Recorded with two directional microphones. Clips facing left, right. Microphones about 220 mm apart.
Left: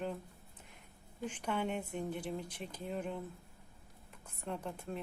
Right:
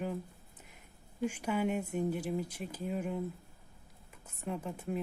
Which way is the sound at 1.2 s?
10° right (ahead or behind).